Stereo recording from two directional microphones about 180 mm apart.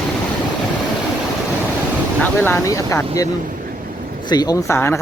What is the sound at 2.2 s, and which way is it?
Speech, 15° left (ahead or behind).